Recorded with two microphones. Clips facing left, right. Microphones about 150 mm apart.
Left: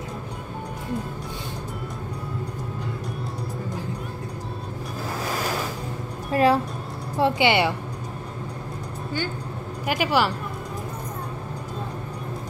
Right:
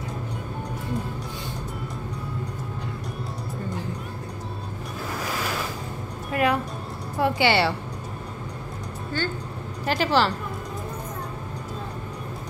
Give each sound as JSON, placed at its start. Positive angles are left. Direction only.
{"t": 6.3, "sound": "music", "side_deg": 30}
{"t": 7.2, "sound": "a woman's voice", "side_deg": 25}
{"t": 9.8, "sound": "a woman's voice", "side_deg": 10}